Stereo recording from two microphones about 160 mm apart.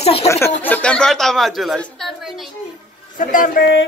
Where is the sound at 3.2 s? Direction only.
55° left (ahead or behind); by 3.8 s 90° left.